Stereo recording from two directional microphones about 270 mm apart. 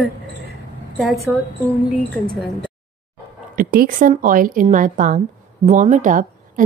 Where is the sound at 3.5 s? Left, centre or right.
Right.